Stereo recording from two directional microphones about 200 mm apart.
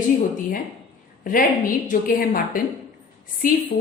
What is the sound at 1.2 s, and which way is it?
A woman's voice, 45° left (ahead or behind).